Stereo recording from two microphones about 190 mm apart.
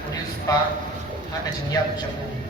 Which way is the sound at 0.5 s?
20° left (ahead or behind).